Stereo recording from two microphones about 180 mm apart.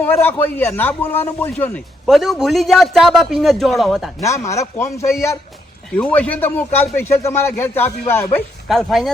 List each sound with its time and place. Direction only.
0.0 s a man's voice: 10° left (ahead or behind)
4.2 s a man's voice: 15° left (ahead or behind)
8.6 s a man's voice: centre (ahead or behind)